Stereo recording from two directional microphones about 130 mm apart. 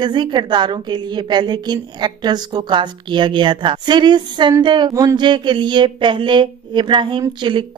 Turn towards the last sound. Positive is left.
turn(degrees=-35)  # may be behind; listen again after turning